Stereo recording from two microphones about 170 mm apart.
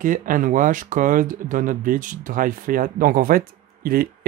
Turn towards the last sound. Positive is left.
turn(degrees=-60)  # may be behind; listen again after turning